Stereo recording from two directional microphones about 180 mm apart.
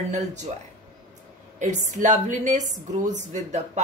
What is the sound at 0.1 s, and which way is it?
Speech, 40° right (ahead or behind).